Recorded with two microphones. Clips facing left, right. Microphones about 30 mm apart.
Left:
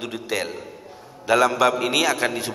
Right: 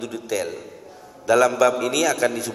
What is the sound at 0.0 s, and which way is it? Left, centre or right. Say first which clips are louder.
A man's voice: right 1 dB; left.